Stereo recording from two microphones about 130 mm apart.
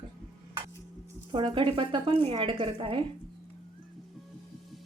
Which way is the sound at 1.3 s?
40° right (ahead or behind).